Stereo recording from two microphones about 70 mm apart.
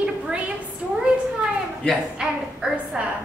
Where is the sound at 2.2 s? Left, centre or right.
Centre.